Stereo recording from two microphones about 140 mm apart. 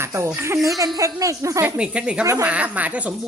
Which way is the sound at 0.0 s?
20° right (ahead or behind).